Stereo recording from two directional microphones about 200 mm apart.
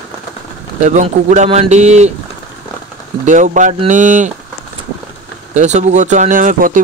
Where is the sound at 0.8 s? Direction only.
35° right (ahead or behind).